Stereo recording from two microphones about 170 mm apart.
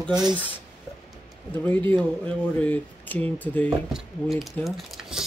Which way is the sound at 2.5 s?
10° left (ahead or behind).